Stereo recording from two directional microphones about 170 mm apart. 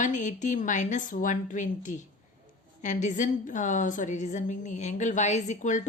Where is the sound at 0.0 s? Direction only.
45° left (ahead or behind).